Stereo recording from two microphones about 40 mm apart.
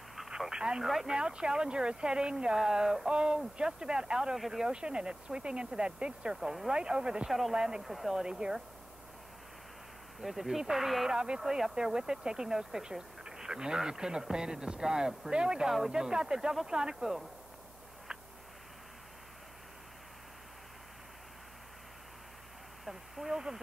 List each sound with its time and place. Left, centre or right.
0.5 s radio: centre
1.0 s speech: centre
4.7 s speech: right
6.3 s speech: centre
6.7 s speech: right
7.2 s speech: centre
7.5 s speech: centre
7.8 s speech: centre
8.1 s speech: centre
10.2 s speech: centre
11.1 s speech: centre
22.8 s a sound: centre